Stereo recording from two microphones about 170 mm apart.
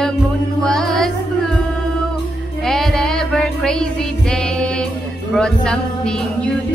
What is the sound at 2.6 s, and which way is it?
Music, centre (ahead or behind).